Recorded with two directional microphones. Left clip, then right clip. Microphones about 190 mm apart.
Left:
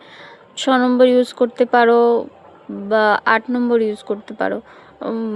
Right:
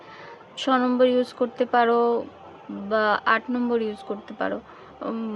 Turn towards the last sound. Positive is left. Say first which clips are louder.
# left 7 dB
turn(degrees=30)  # may be behind; listen again after turning